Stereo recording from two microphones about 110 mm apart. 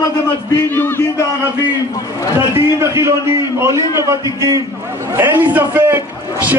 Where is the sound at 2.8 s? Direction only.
25° right (ahead or behind).